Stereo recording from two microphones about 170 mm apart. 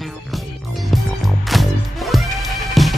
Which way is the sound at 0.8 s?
Centre (ahead or behind).